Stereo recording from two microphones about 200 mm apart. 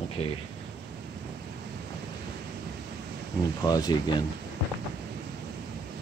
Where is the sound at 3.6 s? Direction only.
20° left (ahead or behind).